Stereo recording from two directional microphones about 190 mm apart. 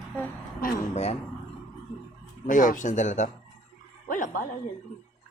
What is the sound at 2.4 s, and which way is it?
Speech, 45° left (ahead or behind).